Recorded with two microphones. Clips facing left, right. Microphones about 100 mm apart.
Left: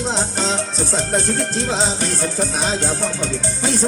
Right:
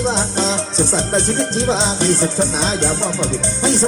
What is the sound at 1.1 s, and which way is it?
Music, 25° right (ahead or behind).